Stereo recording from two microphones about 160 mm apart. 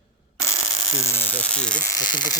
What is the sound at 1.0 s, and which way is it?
Speech, 15° left (ahead or behind).